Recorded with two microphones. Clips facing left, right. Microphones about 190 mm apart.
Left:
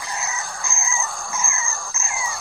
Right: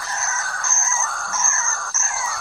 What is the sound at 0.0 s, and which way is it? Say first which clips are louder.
Bird: right 1 dB; 15° left (ahead or behind).